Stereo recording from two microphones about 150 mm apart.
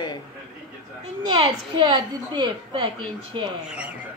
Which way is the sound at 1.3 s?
30° right (ahead or behind).